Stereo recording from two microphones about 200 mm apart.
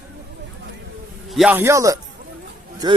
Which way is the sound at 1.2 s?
5° right (ahead or behind).